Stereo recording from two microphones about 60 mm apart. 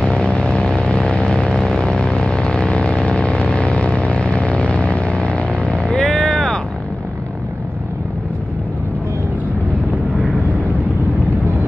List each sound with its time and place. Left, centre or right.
0.0 s vehicle: centre
6.0 s vehicle: centre